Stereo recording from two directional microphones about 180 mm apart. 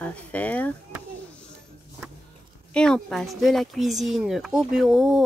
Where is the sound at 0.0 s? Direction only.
10° left (ahead or behind).